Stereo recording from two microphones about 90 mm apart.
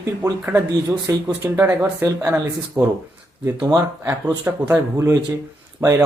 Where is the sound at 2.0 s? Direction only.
30° right (ahead or behind).